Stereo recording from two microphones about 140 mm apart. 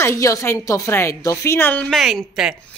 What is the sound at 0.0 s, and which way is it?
A woman's voice, 20° left (ahead or behind).